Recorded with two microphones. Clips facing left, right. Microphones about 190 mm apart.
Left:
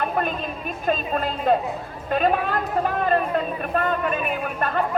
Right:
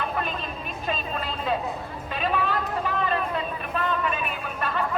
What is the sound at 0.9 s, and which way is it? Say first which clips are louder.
Speech: left 7 dB; 50° left (ahead or behind).